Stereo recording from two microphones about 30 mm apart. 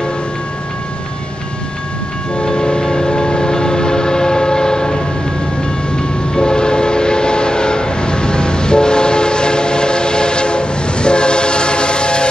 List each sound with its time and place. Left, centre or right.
2.3 s train: left
6.3 s train: left